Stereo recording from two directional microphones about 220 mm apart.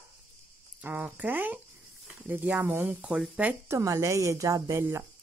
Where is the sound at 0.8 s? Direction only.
5° right (ahead or behind).